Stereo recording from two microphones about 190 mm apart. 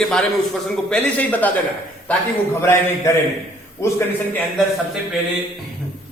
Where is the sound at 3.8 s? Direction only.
15° left (ahead or behind).